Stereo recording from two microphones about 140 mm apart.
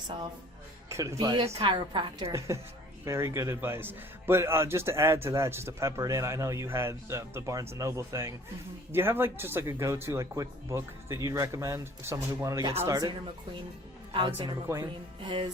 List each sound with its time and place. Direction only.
0.9 s speech: 20° right (ahead or behind)
1.5 s a woman's voice: 45° right (ahead or behind)
1.7 s a woman's voice: 35° right (ahead or behind)
3.0 s a man's voice: 20° right (ahead or behind)
14.1 s a woman's voice: 40° right (ahead or behind)